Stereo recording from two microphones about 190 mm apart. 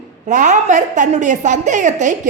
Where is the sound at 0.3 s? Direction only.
40° right (ahead or behind).